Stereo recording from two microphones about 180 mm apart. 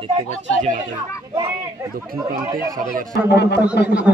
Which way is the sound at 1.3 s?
20° right (ahead or behind).